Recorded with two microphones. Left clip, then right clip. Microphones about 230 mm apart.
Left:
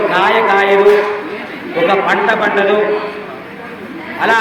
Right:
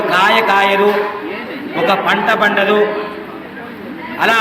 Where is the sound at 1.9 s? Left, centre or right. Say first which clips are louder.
Even; right.